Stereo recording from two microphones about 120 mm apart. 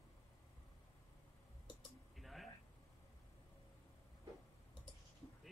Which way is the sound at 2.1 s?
Centre (ahead or behind).